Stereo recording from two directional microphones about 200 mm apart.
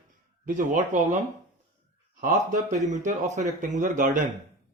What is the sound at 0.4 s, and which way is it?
Speech, 40° right (ahead or behind).